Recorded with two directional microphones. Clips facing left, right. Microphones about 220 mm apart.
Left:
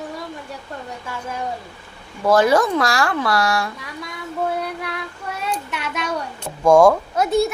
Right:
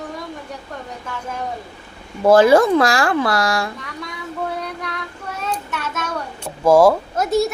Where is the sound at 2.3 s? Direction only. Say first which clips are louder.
Right 4 dB; 25° right (ahead or behind).